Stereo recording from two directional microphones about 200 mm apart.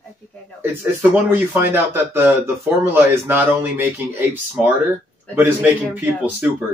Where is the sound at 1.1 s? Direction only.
10° right (ahead or behind).